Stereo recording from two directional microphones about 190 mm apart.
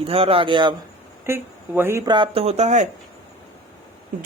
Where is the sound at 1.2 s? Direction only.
10° right (ahead or behind); by 2.9 s 40° right (ahead or behind).